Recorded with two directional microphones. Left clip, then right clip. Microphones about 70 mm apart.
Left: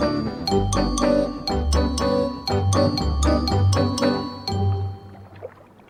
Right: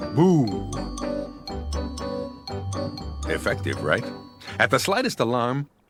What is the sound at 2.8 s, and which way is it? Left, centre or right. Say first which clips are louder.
Music: left 10 dB; right.